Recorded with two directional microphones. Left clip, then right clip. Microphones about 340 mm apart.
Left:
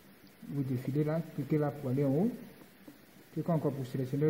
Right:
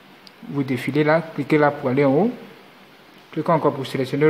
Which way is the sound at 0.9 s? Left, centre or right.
Centre.